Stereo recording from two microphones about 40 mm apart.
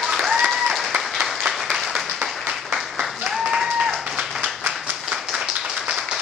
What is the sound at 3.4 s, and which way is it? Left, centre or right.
Applause, centre.